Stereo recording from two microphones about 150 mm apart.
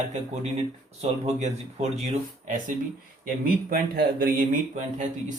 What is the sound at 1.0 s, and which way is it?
Speech, 45° right (ahead or behind).